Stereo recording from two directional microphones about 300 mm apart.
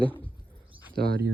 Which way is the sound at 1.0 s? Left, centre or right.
Right.